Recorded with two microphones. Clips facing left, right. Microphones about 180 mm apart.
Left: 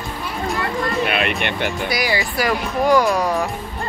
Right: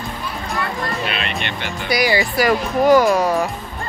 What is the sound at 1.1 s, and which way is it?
Speech, 55° left (ahead or behind).